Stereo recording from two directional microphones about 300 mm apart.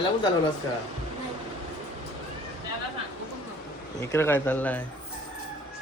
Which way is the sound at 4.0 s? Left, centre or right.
Centre.